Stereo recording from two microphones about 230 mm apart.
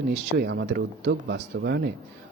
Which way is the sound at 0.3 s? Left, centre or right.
Right.